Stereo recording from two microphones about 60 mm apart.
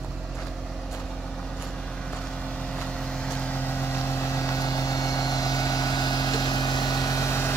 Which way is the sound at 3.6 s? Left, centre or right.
Left.